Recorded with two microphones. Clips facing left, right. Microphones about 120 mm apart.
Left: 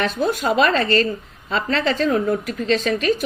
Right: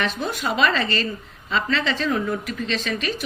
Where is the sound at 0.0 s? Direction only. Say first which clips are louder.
Left 5 dB; 40° left (ahead or behind).